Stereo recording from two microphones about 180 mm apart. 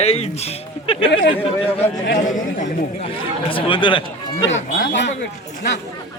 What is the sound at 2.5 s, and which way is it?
Speech, 45° left (ahead or behind).